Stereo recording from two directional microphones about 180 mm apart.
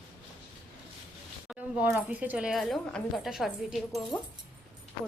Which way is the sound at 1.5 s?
10° right (ahead or behind).